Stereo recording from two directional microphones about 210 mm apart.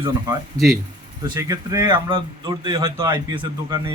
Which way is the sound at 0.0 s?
15° right (ahead or behind).